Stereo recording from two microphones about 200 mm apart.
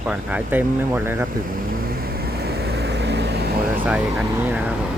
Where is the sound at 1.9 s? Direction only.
50° right (ahead or behind).